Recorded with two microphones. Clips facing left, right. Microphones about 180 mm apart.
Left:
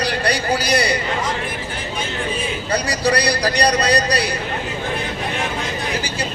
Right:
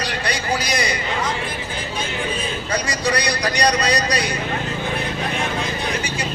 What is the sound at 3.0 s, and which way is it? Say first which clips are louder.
A man's voice: left 4 dB; 30° left (ahead or behind).